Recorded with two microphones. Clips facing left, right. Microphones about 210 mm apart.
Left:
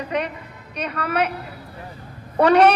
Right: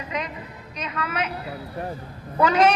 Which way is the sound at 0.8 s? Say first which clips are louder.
Left 6 dB; 60° left (ahead or behind).